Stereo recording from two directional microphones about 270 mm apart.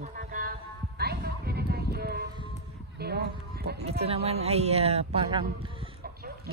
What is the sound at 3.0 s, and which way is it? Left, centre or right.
Speech, right.